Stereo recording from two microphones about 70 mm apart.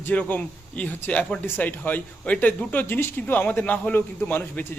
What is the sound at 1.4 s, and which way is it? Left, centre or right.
Speech, left.